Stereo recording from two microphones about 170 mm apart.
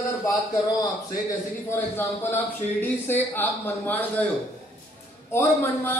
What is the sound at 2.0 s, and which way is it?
A man's voice, 10° left (ahead or behind).